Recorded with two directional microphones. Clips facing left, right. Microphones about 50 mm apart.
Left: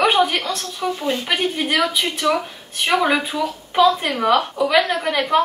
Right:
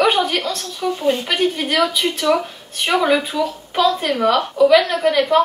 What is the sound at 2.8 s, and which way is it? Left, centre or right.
Speech, centre.